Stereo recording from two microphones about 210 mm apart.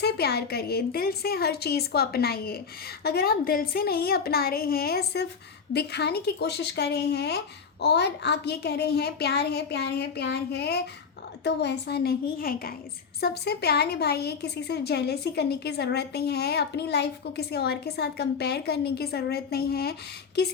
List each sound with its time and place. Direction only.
0.0 s a woman's voice: 50° left (ahead or behind)